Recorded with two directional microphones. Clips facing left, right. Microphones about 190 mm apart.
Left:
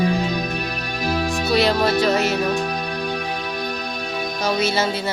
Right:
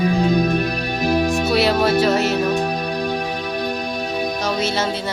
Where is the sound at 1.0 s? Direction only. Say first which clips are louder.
Right 4 dB; 20° right (ahead or behind).